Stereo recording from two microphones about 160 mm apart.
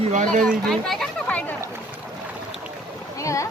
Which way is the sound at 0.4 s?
Centre (ahead or behind).